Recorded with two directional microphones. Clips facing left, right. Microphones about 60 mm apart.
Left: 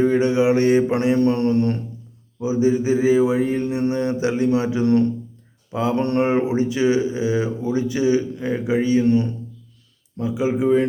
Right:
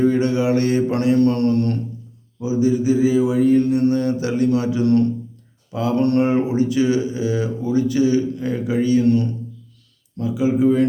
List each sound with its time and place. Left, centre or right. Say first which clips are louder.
0.0 s speech: left 1 dB; left